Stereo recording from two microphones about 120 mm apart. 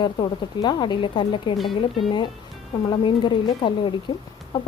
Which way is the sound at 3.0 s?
40° left (ahead or behind).